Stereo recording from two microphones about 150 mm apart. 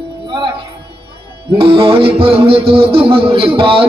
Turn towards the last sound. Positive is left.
turn(degrees=-40)  # may be behind; listen again after turning